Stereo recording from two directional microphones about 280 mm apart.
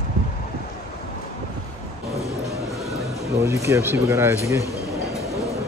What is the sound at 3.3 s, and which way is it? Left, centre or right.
Speech, centre.